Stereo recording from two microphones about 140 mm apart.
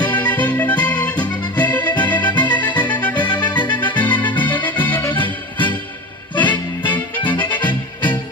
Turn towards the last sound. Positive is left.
turn(degrees=35)  # may be behind; listen again after turning